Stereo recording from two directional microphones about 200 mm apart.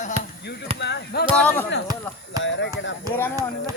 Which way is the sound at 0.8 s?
60° left (ahead or behind).